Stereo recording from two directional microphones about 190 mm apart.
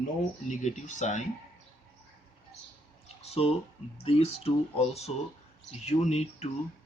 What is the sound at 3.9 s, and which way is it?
Speech, 30° left (ahead or behind).